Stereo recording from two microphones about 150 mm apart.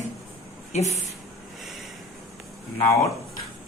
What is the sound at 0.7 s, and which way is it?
Speech, 45° left (ahead or behind).